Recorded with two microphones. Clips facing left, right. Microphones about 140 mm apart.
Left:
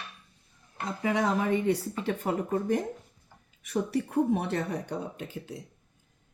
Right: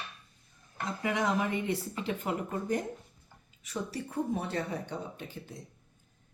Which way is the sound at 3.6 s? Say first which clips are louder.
Left 8 dB; 65° left (ahead or behind).